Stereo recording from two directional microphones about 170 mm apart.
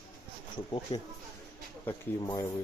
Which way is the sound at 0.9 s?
30° left (ahead or behind).